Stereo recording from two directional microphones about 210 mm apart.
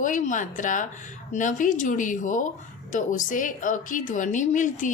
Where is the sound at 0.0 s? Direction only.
35° left (ahead or behind).